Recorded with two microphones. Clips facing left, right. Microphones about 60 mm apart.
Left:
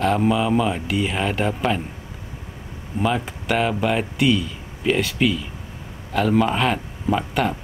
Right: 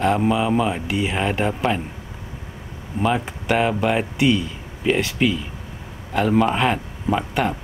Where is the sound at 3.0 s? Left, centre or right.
Centre.